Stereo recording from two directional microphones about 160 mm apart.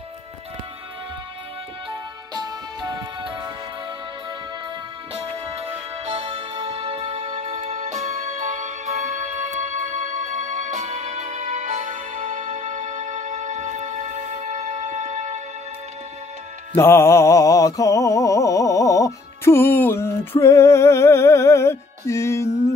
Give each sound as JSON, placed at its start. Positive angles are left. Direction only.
{"t": 1.9, "sound": "music", "side_deg": -25}
{"t": 5.1, "sound": "music", "side_deg": -35}
{"t": 16.7, "sound": "music", "side_deg": 15}